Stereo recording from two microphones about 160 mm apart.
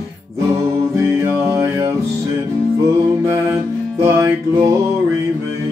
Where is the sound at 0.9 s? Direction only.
15° right (ahead or behind).